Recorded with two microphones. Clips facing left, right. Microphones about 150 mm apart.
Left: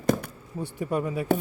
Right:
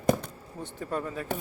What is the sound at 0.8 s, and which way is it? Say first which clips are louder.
Speech: left 5 dB; 10° left (ahead or behind).